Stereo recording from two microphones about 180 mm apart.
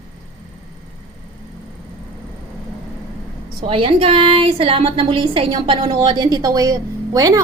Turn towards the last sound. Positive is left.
turn(degrees=-20)  # may be behind; listen again after turning